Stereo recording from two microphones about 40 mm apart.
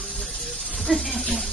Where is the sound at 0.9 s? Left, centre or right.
Centre.